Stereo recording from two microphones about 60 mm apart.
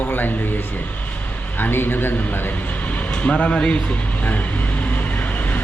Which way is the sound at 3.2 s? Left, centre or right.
Centre.